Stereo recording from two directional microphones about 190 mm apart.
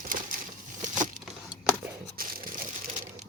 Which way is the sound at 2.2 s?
50° right (ahead or behind).